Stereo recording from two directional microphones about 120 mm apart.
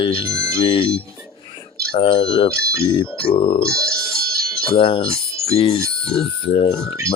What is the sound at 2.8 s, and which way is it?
Speech, 45° left (ahead or behind).